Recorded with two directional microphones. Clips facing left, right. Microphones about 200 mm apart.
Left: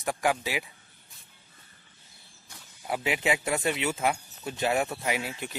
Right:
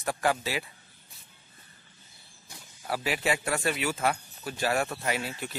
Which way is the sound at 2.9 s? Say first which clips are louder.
Left 1 dB; 20° left (ahead or behind).